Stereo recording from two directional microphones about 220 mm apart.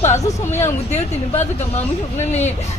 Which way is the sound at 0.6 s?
30° left (ahead or behind).